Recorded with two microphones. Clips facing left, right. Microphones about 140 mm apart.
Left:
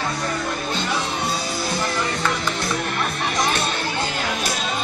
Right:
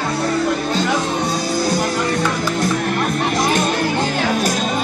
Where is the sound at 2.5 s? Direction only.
45° right (ahead or behind).